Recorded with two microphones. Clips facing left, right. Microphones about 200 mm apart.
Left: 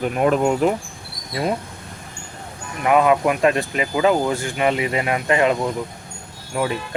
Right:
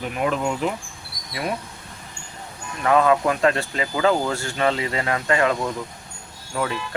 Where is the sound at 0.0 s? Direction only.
45° left (ahead or behind).